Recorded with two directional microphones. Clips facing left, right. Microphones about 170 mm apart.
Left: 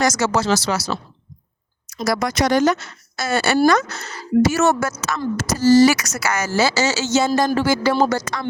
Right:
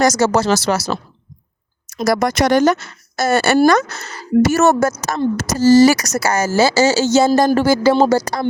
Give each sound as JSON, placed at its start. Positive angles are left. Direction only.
{"t": 0.0, "sound": "speech", "side_deg": -40}
{"t": 2.0, "sound": "speech", "side_deg": -50}